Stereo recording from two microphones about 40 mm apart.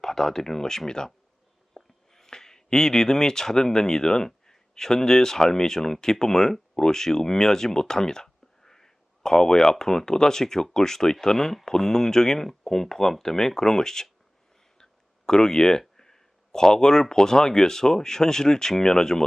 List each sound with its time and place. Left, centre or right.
0.0 s speech: centre
15.3 s speech: centre